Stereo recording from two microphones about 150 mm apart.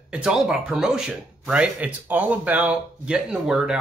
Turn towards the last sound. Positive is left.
turn(degrees=0)  # may be behind; listen again after turning